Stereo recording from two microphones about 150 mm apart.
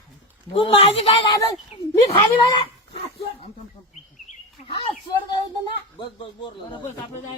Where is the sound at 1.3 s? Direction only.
25° left (ahead or behind).